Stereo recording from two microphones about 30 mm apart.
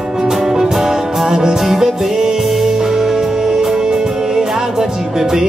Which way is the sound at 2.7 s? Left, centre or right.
Centre.